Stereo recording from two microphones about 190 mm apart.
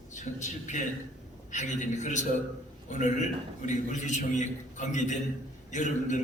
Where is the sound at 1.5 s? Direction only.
40° left (ahead or behind).